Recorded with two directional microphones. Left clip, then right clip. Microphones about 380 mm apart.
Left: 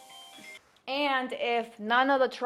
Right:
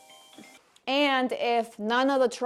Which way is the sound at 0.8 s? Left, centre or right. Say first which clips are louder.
Right 4 dB; right.